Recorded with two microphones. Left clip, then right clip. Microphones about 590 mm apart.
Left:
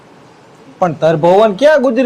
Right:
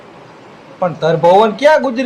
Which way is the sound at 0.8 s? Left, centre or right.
Left.